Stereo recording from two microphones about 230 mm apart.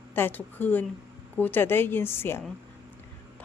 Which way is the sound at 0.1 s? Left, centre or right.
Centre.